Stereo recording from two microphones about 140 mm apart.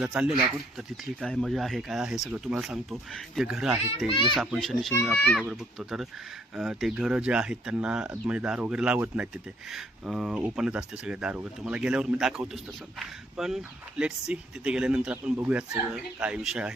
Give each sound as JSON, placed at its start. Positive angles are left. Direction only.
{"t": 0.0, "sound": "speech", "side_deg": -5}
{"t": 4.1, "sound": "a child's voice", "side_deg": 40}
{"t": 4.4, "sound": "speech", "side_deg": 0}
{"t": 5.1, "sound": "speech", "side_deg": 15}
{"t": 5.4, "sound": "speech", "side_deg": 0}